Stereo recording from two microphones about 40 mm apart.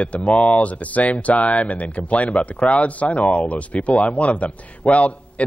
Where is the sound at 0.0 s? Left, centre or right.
Left.